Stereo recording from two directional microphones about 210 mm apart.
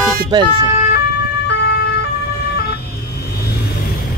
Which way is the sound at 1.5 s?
50° left (ahead or behind).